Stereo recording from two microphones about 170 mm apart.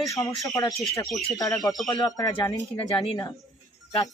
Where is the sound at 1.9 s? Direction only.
20° left (ahead or behind).